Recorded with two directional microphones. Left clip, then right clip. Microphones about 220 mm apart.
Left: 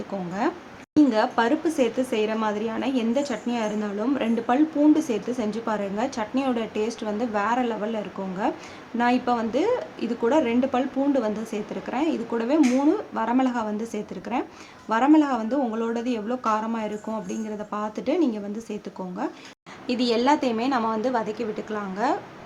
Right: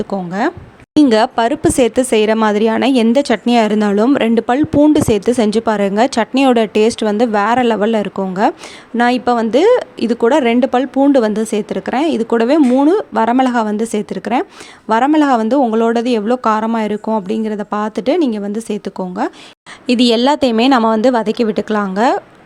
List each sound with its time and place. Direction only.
0.1 s a woman's voice: 35° right (ahead or behind)